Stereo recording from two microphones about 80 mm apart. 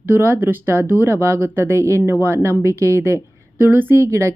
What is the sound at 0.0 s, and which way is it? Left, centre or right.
Speech, right.